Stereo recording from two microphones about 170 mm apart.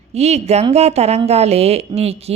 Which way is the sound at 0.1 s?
40° right (ahead or behind).